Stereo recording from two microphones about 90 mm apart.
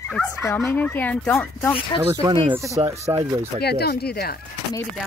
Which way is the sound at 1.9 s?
65° left (ahead or behind).